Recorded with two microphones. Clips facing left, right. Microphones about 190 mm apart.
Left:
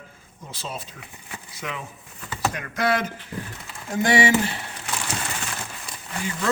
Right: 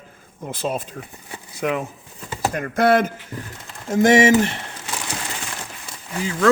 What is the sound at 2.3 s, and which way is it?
Speech, 45° right (ahead or behind).